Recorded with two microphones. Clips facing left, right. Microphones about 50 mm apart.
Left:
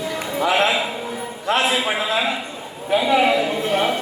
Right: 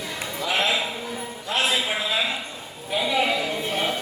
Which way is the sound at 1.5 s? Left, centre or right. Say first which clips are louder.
Left 6 dB; left.